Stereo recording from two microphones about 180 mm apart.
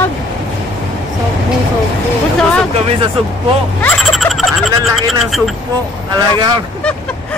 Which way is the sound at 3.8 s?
5° left (ahead or behind).